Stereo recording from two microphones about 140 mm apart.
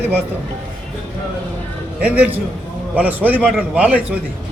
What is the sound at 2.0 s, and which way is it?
A man's voice, 10° right (ahead or behind).